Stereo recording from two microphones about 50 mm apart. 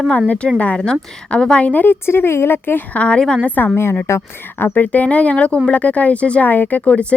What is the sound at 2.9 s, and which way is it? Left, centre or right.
Speech, left.